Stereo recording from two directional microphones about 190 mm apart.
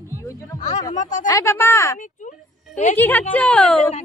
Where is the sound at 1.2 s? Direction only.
15° left (ahead or behind).